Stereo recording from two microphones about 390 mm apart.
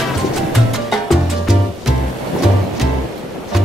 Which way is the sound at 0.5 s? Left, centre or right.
Centre.